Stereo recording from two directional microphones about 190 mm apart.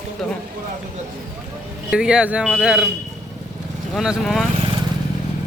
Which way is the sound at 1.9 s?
5° right (ahead or behind).